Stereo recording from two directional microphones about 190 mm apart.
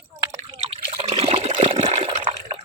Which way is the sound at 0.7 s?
30° right (ahead or behind).